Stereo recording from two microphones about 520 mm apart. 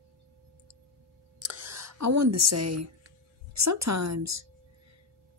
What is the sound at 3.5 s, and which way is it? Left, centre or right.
Speech, right.